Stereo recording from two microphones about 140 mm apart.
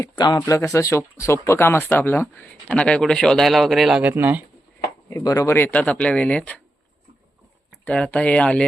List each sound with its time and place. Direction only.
0.0 s speech: 30° left (ahead or behind); by 4.4 s 15° right (ahead or behind)
5.0 s speech: 25° left (ahead or behind)
7.9 s speech: 10° left (ahead or behind)